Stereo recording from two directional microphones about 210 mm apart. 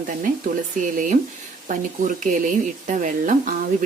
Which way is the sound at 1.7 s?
35° right (ahead or behind).